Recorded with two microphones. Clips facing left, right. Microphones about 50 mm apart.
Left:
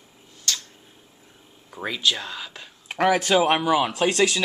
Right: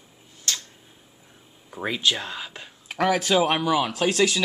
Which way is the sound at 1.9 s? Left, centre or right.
Right.